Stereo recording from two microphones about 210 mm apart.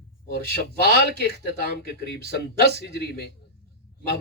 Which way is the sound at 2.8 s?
50° left (ahead or behind).